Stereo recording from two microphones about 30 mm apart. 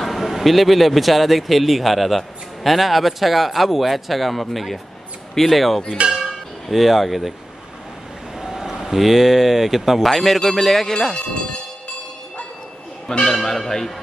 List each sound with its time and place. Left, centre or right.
0.0 s a man's voice: centre
6.0 s speech: right
6.7 s a man's voice: centre
8.4 s speech: centre
10.1 s speech: centre
13.2 s speech: centre